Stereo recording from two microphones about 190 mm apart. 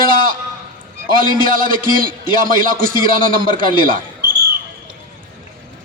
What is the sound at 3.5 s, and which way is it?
Speech, 45° right (ahead or behind).